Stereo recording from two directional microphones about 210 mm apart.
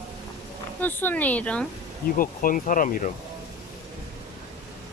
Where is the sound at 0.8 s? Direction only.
10° left (ahead or behind).